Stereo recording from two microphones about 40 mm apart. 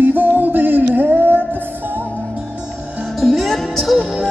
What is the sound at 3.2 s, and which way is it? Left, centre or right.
Music, centre.